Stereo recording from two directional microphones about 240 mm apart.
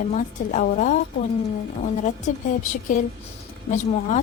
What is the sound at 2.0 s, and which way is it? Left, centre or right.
A woman's voice, left.